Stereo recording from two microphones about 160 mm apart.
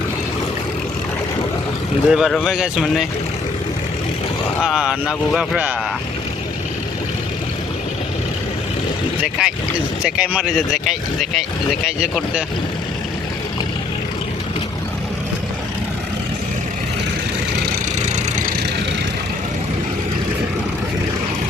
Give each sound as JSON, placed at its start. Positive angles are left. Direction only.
{"t": 2.0, "sound": "speech", "side_deg": 0}
{"t": 4.6, "sound": "speech", "side_deg": -5}
{"t": 9.4, "sound": "speech", "side_deg": -5}
{"t": 18.0, "sound": "vehicle", "side_deg": -55}